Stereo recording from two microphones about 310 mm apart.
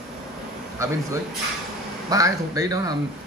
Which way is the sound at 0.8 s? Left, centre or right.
Centre.